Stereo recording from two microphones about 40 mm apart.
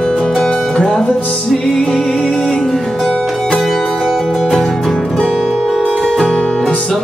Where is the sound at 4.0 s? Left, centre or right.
Centre.